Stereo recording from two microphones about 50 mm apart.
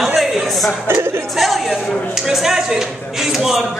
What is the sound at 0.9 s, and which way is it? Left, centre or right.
Speech, right.